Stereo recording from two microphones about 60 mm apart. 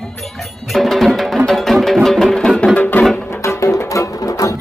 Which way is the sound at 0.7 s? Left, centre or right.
Centre.